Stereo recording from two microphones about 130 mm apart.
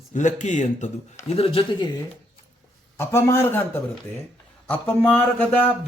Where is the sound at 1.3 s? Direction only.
45° left (ahead or behind).